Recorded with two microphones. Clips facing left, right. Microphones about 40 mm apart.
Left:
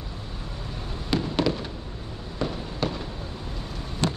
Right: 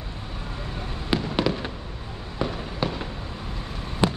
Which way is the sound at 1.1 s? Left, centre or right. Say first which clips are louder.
Even; centre.